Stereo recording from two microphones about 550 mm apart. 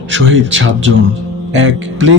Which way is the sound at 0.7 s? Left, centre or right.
Right.